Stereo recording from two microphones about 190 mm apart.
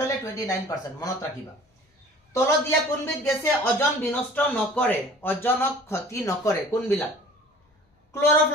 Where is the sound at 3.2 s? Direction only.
10° left (ahead or behind).